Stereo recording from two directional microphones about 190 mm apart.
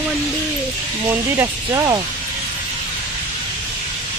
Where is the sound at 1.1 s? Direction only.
15° right (ahead or behind).